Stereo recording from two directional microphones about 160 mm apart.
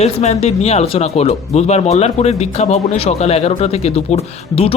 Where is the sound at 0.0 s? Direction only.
45° left (ahead or behind).